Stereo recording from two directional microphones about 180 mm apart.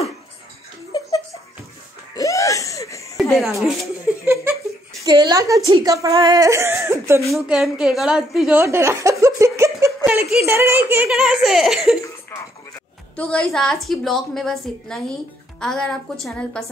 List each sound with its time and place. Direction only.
0.9 s giggle: 20° left (ahead or behind)
2.1 s wheeze: 20° left (ahead or behind)
3.2 s speech: centre (ahead or behind)
4.1 s laughter: 10° right (ahead or behind)
5.0 s speech: 20° right (ahead or behind)
7.2 s a woman's voice: centre (ahead or behind)
8.5 s speech: 15° right (ahead or behind)
9.2 s a sound: 15° right (ahead or behind)
10.0 s a woman's voice: 10° right (ahead or behind)
13.1 s a woman's voice: 5° left (ahead or behind)